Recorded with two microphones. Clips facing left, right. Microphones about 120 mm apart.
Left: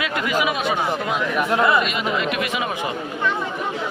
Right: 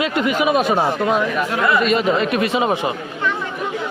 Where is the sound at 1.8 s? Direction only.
40° right (ahead or behind).